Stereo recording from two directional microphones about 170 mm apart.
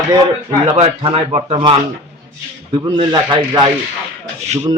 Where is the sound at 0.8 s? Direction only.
35° right (ahead or behind).